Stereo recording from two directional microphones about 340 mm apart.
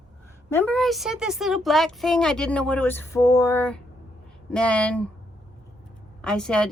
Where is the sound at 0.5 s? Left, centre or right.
Centre.